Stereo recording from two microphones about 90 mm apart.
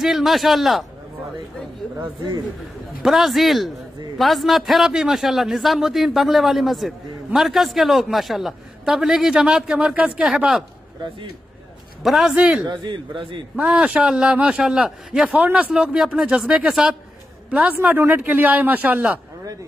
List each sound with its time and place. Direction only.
0.0 s a man's voice: centre (ahead or behind)
3.0 s a man's voice: 5° right (ahead or behind)
12.0 s a man's voice: centre (ahead or behind)
12.6 s a man's voice: 60° right (ahead or behind)
13.6 s a man's voice: 10° right (ahead or behind)